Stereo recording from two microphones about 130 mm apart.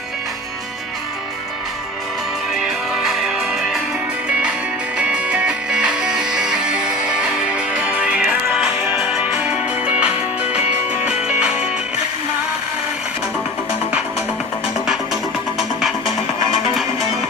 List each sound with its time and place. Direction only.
2.6 s music: 5° right (ahead or behind)
4.9 s music: 10° right (ahead or behind)
14.8 s music: centre (ahead or behind)